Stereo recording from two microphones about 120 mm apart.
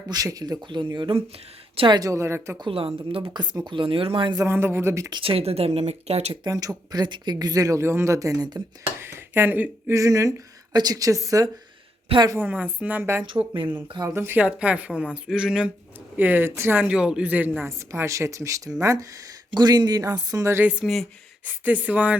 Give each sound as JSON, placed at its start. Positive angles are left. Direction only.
{"t": 0.1, "sound": "speech", "side_deg": -30}
{"t": 1.9, "sound": "a woman's voice", "side_deg": -30}
{"t": 2.6, "sound": "a woman's voice", "side_deg": -50}
{"t": 4.4, "sound": "a woman's voice", "side_deg": -20}
{"t": 5.1, "sound": "speech", "side_deg": -50}
{"t": 6.4, "sound": "speech", "side_deg": -30}
{"t": 9.0, "sound": "speech", "side_deg": -20}
{"t": 9.9, "sound": "a woman's voice", "side_deg": -25}
{"t": 12.4, "sound": "speech", "side_deg": -15}
{"t": 13.8, "sound": "speech", "side_deg": -40}
{"t": 14.1, "sound": "a woman's voice", "side_deg": -20}
{"t": 20.3, "sound": "a woman's voice", "side_deg": -25}
{"t": 20.7, "sound": "speech", "side_deg": -5}
{"t": 21.6, "sound": "speech", "side_deg": -15}